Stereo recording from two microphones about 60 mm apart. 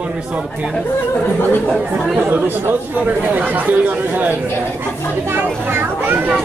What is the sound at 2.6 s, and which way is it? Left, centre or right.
Speech, right.